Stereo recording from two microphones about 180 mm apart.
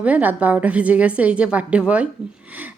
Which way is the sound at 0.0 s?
10° right (ahead or behind).